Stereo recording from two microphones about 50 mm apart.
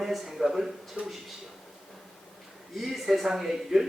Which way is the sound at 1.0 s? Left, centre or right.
Right.